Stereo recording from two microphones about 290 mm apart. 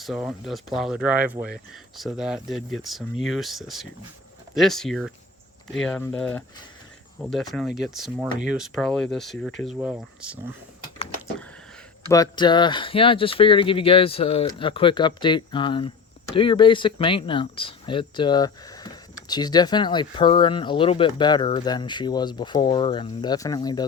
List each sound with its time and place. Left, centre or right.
0.0 s speech: centre
12.0 s speech: centre